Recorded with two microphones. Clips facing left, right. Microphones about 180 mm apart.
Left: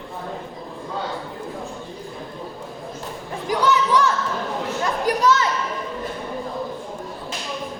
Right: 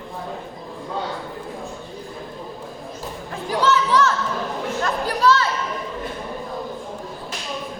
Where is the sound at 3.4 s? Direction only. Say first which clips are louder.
Even; 15° left (ahead or behind).